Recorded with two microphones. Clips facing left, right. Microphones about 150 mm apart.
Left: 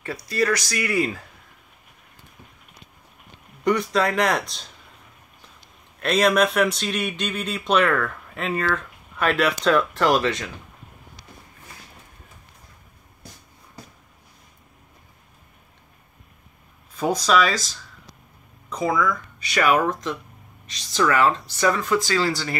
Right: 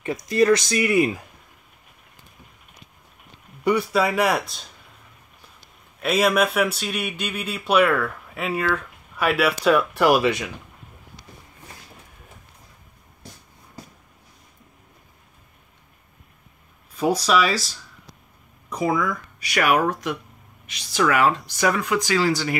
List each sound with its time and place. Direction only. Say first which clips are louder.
0.0 s speech: right 5 dB; 20° right (ahead or behind)
3.6 s speech: right 1 dB; 5° right (ahead or behind)
6.0 s speech: left 1 dB; 5° right (ahead or behind)
16.9 s speech: even; 10° right (ahead or behind)